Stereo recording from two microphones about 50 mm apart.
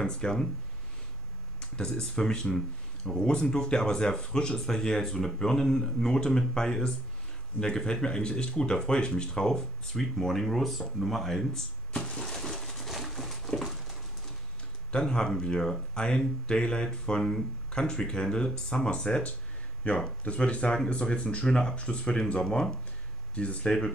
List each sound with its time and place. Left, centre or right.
0.0 s speech: centre
1.6 s speech: centre
11.9 s a sound: centre
14.9 s speech: centre
19.8 s speech: left